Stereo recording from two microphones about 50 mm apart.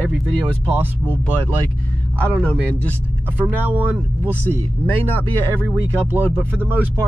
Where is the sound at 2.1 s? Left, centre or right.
Left.